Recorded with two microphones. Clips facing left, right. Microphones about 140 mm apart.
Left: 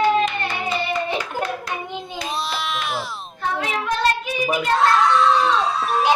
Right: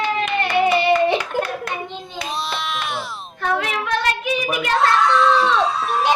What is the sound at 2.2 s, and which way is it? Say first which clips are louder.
Baby cry: right 1 dB; centre (ahead or behind).